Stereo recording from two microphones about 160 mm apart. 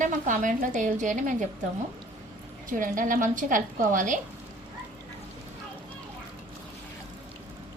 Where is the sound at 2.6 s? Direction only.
55° right (ahead or behind).